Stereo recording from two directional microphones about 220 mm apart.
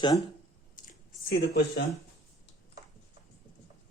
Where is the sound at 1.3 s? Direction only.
45° left (ahead or behind).